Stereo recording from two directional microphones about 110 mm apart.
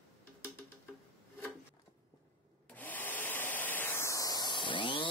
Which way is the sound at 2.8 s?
15° left (ahead or behind).